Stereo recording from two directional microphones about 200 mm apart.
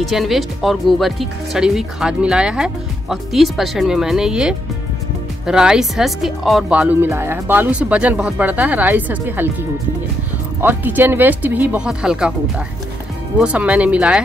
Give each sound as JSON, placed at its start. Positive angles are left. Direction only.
{"t": 0.0, "sound": "speech", "side_deg": 0}
{"t": 10.6, "sound": "speech", "side_deg": -10}